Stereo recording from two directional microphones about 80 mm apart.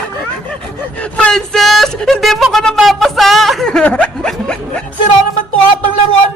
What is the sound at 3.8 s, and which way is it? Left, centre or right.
Snicker, centre.